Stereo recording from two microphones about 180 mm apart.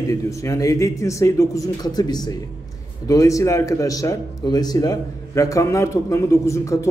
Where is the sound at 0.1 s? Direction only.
15° left (ahead or behind).